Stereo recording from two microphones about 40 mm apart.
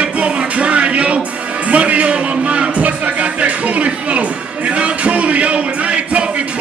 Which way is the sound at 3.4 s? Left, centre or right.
Right.